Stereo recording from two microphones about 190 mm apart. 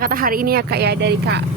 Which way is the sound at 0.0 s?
50° right (ahead or behind).